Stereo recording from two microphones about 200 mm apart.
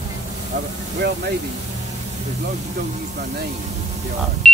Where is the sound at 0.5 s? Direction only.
60° right (ahead or behind).